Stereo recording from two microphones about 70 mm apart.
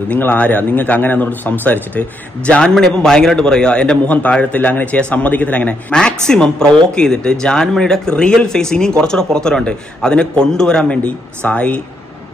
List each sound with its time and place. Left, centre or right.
0.1 s a man's voice: left
2.7 s a man's voice: centre